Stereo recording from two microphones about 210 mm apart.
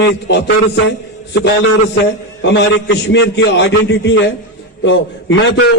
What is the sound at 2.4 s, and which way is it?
A man's voice, 55° left (ahead or behind).